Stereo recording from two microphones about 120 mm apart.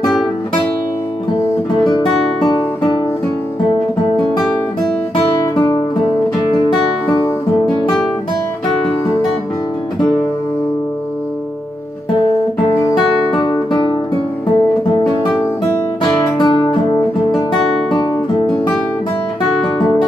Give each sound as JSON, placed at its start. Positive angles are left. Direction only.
{"t": 1.7, "sound": "music", "side_deg": 35}
{"t": 5.6, "sound": "music", "side_deg": 40}
{"t": 12.9, "sound": "music", "side_deg": 40}
{"t": 16.3, "sound": "music", "side_deg": 35}